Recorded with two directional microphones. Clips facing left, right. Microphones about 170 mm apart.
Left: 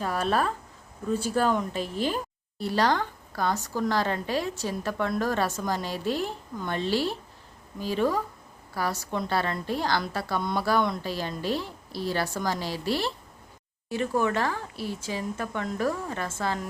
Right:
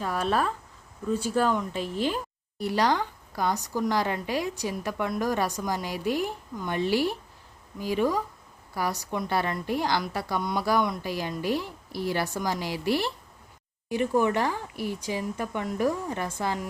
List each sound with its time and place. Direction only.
0.0 s speech: 10° left (ahead or behind)
1.7 s a woman's voice: 40° left (ahead or behind)
2.6 s speech: 15° right (ahead or behind)